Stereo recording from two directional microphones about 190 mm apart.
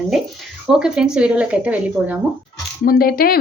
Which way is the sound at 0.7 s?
5° right (ahead or behind).